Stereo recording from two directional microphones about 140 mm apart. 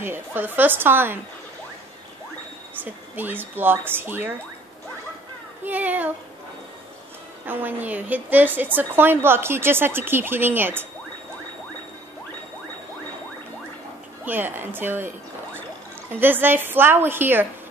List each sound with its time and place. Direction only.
0.0 s a woman's voice: 15° right (ahead or behind)
2.8 s a woman's voice: 15° right (ahead or behind)
5.7 s a woman's voice: 10° right (ahead or behind)
7.4 s a woman's voice: 10° right (ahead or behind)
14.2 s a woman's voice: 15° right (ahead or behind)